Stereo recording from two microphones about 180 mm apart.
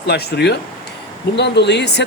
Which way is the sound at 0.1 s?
65° left (ahead or behind).